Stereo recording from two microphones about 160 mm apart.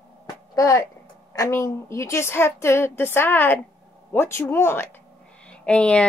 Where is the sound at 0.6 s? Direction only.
20° left (ahead or behind).